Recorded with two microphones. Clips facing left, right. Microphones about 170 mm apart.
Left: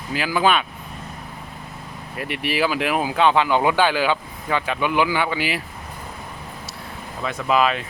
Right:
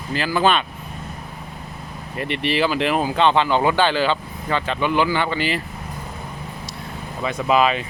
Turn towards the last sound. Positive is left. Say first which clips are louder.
# right 2 dB
turn(degrees=0)  # may be behind; listen again after turning